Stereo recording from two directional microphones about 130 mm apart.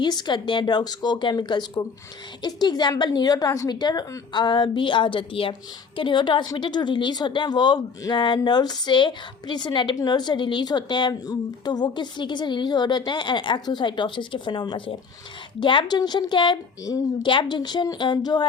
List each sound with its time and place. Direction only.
0.0 s a woman's voice: 35° left (ahead or behind)